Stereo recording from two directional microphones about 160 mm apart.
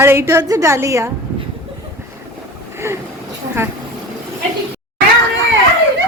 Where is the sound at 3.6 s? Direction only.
15° right (ahead or behind).